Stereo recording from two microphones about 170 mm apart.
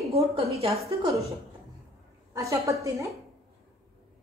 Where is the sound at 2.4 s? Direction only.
20° right (ahead or behind).